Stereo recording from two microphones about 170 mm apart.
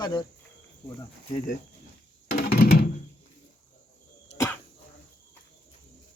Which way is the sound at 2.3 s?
60° left (ahead or behind).